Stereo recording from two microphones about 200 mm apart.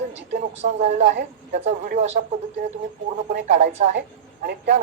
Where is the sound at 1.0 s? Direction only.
60° right (ahead or behind).